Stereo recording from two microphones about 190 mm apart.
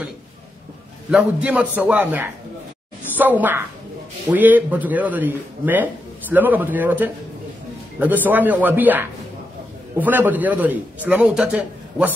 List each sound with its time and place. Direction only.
1.1 s a man's voice: 5° right (ahead or behind)